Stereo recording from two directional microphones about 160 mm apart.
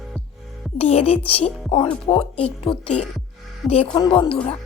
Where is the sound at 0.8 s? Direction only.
40° left (ahead or behind).